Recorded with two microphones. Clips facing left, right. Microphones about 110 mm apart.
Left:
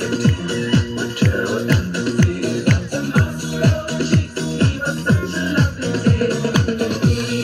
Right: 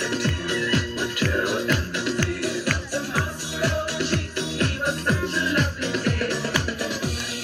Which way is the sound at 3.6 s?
40° left (ahead or behind).